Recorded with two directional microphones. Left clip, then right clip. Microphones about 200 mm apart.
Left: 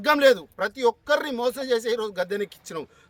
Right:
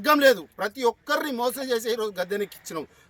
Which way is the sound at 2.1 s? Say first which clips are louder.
Left 1 dB; centre (ahead or behind).